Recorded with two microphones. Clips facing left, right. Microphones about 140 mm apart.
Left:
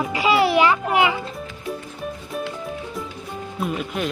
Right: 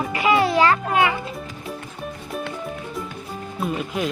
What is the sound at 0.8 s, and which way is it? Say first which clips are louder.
Speech: left 1 dB; 20° left (ahead or behind).